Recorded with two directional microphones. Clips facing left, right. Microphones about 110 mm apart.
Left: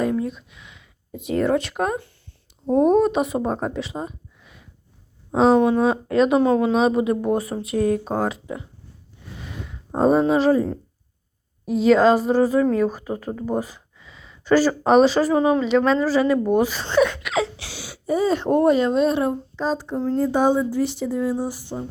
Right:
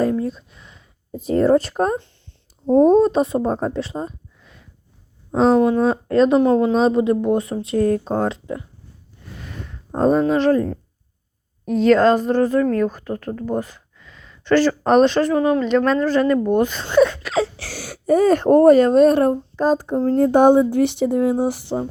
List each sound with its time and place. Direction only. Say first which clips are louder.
0.0 s a sound: right 3 dB; 35° right (ahead or behind)
1.3 s speech: right 5 dB; centre (ahead or behind)
1.5 s speech: right 4 dB; 35° right (ahead or behind)
3.4 s speech: right 3 dB; centre (ahead or behind)
5.5 s speech: right 1 dB; 20° left (ahead or behind)
5.8 s speech: right 2 dB; 5° left (ahead or behind)
7.3 s speech: right 3 dB; 25° right (ahead or behind)
7.8 s speech: right 2 dB; 10° left (ahead or behind)
9.6 s a woman's voice: right 1 dB; 5° left (ahead or behind)
15.4 s speech: even; 15° left (ahead or behind)
15.6 s speech: right 1 dB; 5° left (ahead or behind)
17.0 s speech: right 4 dB; 30° right (ahead or behind); by 20.1 s 45° right (ahead or behind)
20.1 s speech: right 6 dB; 60° right (ahead or behind)